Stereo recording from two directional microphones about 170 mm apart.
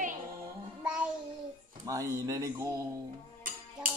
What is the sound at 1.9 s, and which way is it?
Speech, 20° right (ahead or behind).